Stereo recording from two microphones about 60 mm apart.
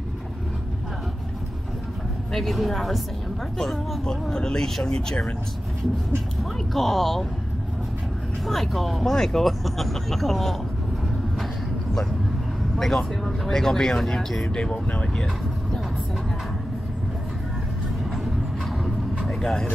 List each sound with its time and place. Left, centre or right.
2.3 s speech: centre
6.7 s speech: centre
8.5 s speech: centre
12.7 s speech: centre
14.5 s speech: centre
19.2 s vehicle: centre